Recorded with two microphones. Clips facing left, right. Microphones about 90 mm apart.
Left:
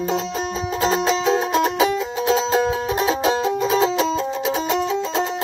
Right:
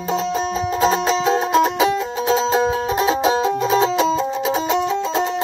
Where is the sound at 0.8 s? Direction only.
5° right (ahead or behind).